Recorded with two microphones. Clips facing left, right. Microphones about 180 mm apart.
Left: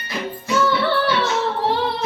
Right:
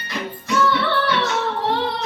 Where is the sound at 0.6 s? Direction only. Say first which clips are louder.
Left 1 dB; 25° left (ahead or behind).